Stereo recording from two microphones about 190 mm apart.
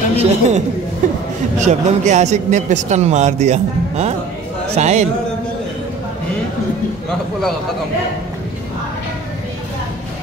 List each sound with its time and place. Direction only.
0.1 s a man's voice: 35° right (ahead or behind)
1.0 s a sound: 40° right (ahead or behind)
1.6 s a man's voice: 40° right (ahead or behind)